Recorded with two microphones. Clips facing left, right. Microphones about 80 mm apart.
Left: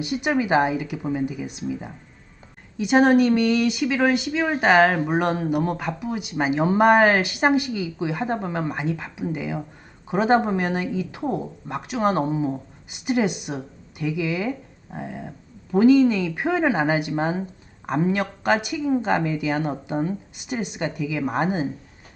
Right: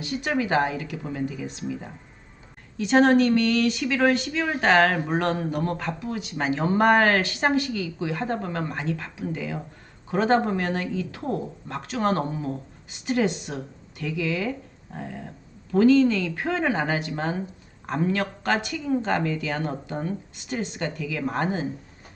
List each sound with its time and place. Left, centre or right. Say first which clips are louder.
0.0 s speech: left 3 dB; centre